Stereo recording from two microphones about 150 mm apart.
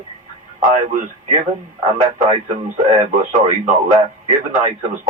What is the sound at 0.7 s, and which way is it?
Speech, 60° right (ahead or behind).